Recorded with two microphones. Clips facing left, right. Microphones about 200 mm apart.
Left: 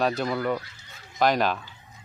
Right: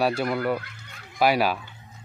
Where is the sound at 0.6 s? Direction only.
60° right (ahead or behind).